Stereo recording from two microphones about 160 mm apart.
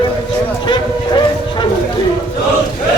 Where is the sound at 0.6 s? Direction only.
30° left (ahead or behind).